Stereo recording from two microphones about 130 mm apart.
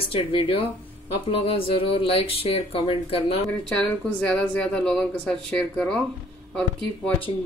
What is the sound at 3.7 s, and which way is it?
A woman's voice, 5° left (ahead or behind).